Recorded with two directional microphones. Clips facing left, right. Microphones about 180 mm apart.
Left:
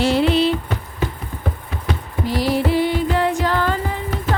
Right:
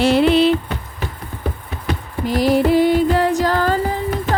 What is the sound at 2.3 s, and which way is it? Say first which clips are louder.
Music: right 4 dB; 50° right (ahead or behind).